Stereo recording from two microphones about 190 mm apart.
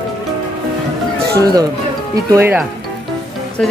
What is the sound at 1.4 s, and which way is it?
Speech, 20° right (ahead or behind).